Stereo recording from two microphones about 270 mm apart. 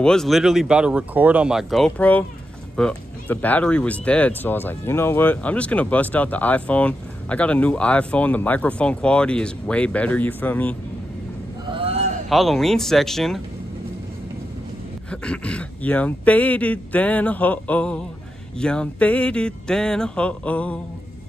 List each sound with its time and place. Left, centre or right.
0.0 s speech: centre
11.7 s a sound: right
12.3 s speech: centre
15.0 s speech: centre